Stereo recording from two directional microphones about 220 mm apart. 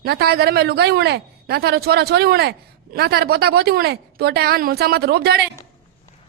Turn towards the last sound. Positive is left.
turn(degrees=-45)  # may be behind; listen again after turning